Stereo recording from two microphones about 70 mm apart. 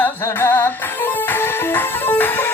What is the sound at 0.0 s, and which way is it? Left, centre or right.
Music, left.